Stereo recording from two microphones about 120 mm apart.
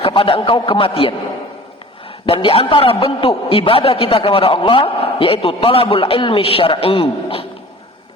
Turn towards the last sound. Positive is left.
turn(degrees=50)  # may be behind; listen again after turning